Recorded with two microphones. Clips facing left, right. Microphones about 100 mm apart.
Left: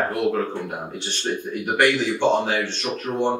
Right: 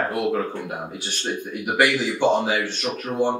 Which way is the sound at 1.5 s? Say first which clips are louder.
Left 1 dB; 5° right (ahead or behind).